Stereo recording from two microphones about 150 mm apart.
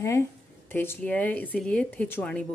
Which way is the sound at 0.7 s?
15° left (ahead or behind).